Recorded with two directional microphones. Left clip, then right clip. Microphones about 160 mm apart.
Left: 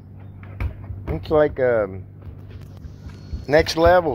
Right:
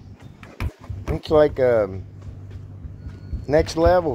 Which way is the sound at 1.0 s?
25° right (ahead or behind).